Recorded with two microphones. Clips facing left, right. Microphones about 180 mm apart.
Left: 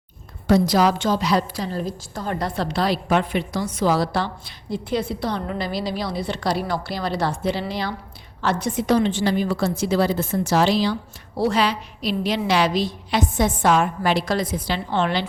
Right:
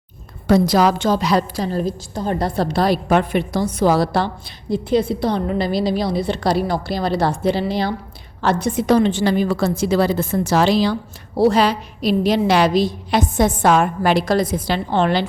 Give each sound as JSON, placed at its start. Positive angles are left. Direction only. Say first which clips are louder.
{"t": 0.4, "sound": "a woman's voice", "louder": "right 3 dB", "side_deg": -55}
{"t": 4.4, "sound": "a woman's voice", "louder": "right 6 dB", "side_deg": -20}
{"t": 8.9, "sound": "a woman's voice", "louder": "right 4 dB", "side_deg": -50}